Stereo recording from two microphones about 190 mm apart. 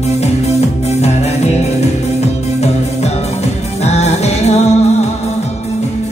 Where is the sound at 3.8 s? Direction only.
35° left (ahead or behind).